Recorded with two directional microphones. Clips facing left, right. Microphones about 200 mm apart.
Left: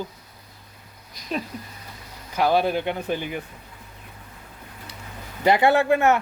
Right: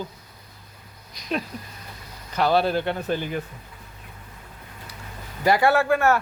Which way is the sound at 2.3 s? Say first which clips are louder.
Even; 10° left (ahead or behind).